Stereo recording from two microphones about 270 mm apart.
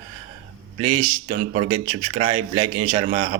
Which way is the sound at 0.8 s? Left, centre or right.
Right.